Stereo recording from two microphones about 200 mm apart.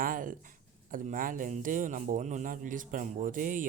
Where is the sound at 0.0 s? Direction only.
40° right (ahead or behind).